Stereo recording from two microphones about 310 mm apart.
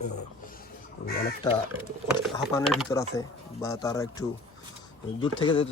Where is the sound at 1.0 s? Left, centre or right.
Left.